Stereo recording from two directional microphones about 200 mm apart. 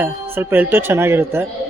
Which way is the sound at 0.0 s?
10° right (ahead or behind).